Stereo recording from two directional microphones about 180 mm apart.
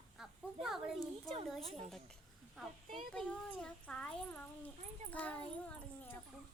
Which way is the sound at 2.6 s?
Centre (ahead or behind).